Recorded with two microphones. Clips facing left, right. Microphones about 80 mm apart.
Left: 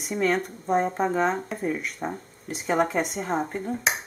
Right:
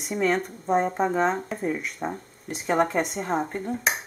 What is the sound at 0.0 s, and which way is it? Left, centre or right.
Speech, centre.